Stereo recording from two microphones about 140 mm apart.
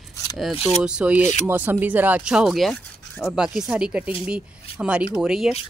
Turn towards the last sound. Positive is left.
turn(degrees=-5)  # may be behind; listen again after turning